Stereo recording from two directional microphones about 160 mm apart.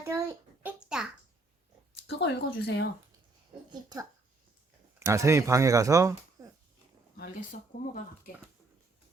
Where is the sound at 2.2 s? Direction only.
90° left.